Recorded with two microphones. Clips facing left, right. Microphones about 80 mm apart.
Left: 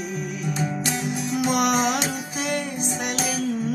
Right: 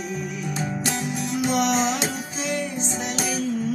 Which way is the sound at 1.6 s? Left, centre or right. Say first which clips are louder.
Even; left.